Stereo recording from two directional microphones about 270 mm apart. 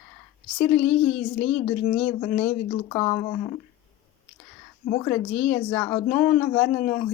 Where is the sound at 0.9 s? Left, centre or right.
Left.